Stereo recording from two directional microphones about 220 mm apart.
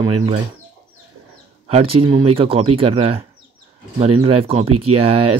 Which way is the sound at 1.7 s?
25° right (ahead or behind).